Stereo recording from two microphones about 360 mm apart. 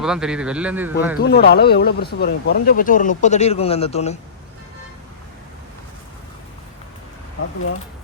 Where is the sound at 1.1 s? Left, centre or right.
Left.